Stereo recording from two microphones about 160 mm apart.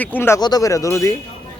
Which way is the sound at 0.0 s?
10° left (ahead or behind).